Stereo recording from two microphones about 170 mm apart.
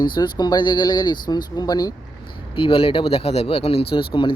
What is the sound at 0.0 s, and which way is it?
Speech, 25° left (ahead or behind).